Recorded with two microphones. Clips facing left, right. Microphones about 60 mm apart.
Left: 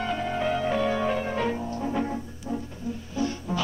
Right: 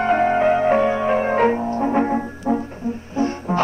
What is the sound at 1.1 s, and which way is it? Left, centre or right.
Music, right.